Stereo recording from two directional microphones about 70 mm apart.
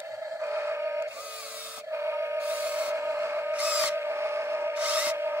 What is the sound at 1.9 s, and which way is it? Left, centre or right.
Music, right.